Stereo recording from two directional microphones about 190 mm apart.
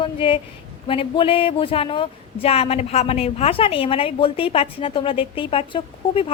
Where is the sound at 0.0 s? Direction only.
30° left (ahead or behind).